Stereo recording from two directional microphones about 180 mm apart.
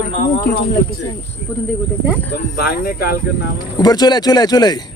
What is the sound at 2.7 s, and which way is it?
Speech, 55° left (ahead or behind).